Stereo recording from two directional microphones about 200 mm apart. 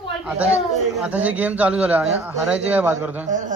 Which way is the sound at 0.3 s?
5° right (ahead or behind).